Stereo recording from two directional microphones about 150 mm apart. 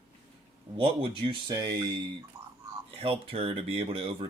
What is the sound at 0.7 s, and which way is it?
Speech, 40° right (ahead or behind).